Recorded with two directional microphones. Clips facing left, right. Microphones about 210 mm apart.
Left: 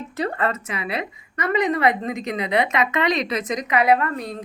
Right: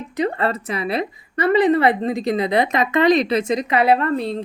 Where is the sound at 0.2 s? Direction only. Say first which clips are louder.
Right 3 dB; 25° right (ahead or behind).